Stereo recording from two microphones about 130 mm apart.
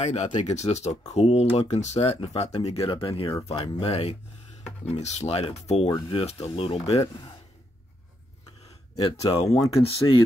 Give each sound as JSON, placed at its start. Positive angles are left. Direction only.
{"t": 0.0, "sound": "speech", "side_deg": 60}
{"t": 6.0, "sound": "speech", "side_deg": 45}
{"t": 9.5, "sound": "speech", "side_deg": 25}
{"t": 9.8, "sound": "speech", "side_deg": 45}